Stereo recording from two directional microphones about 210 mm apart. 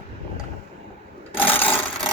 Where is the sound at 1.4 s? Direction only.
10° left (ahead or behind).